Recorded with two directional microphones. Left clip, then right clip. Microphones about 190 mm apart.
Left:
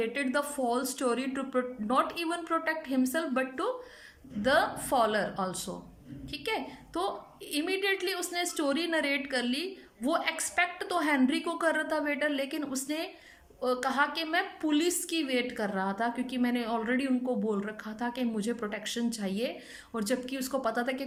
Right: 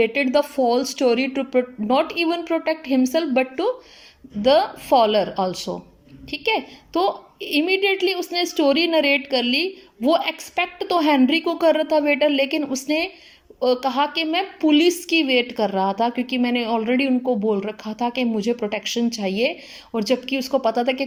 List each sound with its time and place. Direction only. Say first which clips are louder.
0.0 s a woman's voice: right 12 dB; 15° right (ahead or behind)